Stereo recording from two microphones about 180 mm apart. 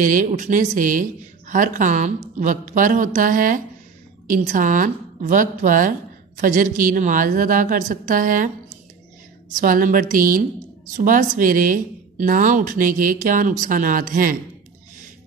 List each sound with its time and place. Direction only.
0.0 s a woman's voice: 50° right (ahead or behind)
9.6 s a woman's voice: 50° right (ahead or behind)